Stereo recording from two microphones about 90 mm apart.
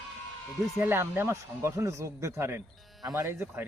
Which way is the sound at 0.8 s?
25° right (ahead or behind).